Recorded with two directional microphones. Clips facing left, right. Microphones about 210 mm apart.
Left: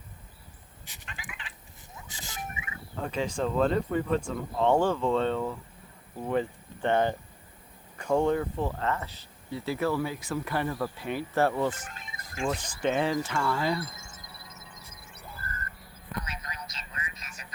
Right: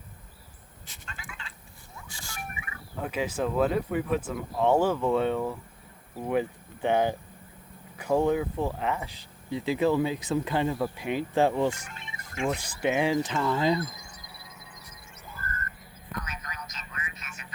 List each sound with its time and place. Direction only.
0.9 s fowl: 15° left (ahead or behind)
2.0 s music: 20° left (ahead or behind)
3.0 s speech: 10° right (ahead or behind)
11.9 s music: 40° left (ahead or behind)
12.5 s speech: 10° right (ahead or behind)
14.3 s a sound: centre (ahead or behind)
14.6 s music: 25° left (ahead or behind)
16.2 s a sound: 30° left (ahead or behind)